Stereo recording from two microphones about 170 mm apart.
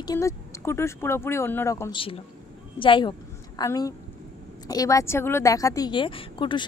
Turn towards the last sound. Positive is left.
turn(degrees=30)  # may be behind; listen again after turning